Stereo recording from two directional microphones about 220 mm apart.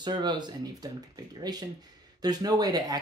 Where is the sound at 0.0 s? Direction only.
20° right (ahead or behind).